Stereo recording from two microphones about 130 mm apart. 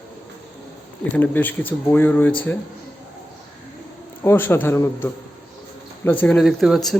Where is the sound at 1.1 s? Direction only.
15° left (ahead or behind).